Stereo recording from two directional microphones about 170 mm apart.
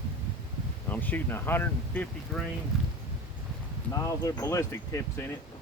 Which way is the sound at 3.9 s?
20° left (ahead or behind).